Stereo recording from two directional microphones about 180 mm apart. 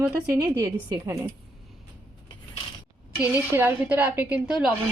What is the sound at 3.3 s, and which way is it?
A woman's voice, 10° right (ahead or behind).